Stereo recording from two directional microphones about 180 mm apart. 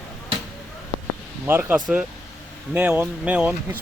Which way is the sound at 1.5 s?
15° right (ahead or behind).